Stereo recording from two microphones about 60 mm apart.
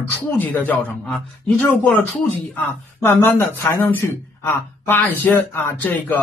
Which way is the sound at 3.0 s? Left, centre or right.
Left.